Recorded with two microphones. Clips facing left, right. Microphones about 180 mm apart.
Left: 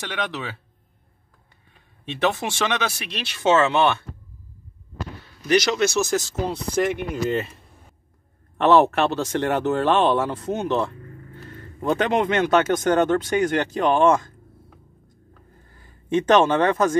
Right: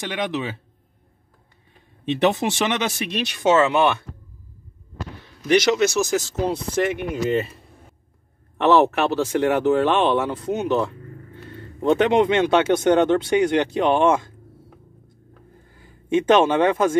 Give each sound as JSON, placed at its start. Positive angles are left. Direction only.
{"t": 0.1, "sound": "speech", "side_deg": -15}
{"t": 2.0, "sound": "speech", "side_deg": -20}
{"t": 5.5, "sound": "speech", "side_deg": -20}
{"t": 8.5, "sound": "speech", "side_deg": 0}
{"t": 11.8, "sound": "a man's voice", "side_deg": -25}
{"t": 12.7, "sound": "speech", "side_deg": -10}
{"t": 15.8, "sound": "speech", "side_deg": -10}